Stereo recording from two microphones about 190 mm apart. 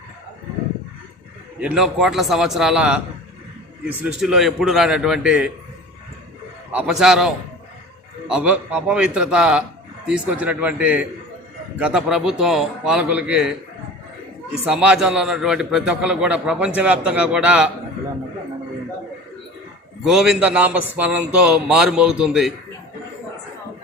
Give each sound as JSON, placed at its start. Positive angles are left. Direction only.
{"t": 1.5, "sound": "a man's voice", "side_deg": -5}
{"t": 4.0, "sound": "a man's voice", "side_deg": -5}
{"t": 6.7, "sound": "a man's voice", "side_deg": -5}
{"t": 14.5, "sound": "a man's voice", "side_deg": -5}
{"t": 20.1, "sound": "a man's voice", "side_deg": -5}